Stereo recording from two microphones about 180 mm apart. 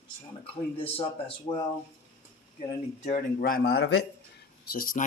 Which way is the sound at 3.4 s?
55° left (ahead or behind).